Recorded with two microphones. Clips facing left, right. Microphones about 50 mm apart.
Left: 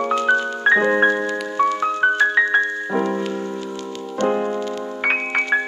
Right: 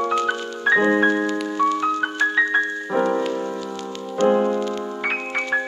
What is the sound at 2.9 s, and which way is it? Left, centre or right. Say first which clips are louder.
Music: right 2 dB; right.